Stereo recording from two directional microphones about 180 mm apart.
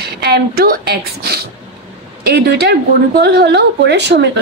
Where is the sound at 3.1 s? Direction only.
65° right (ahead or behind).